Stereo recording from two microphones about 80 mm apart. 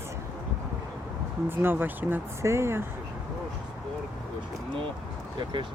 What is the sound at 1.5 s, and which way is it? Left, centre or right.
Speech, right.